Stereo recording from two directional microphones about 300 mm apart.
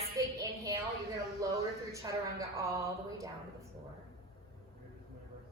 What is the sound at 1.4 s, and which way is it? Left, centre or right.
Speech, centre.